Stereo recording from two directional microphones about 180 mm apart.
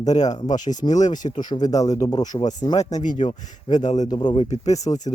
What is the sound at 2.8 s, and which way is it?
Speech, 40° left (ahead or behind).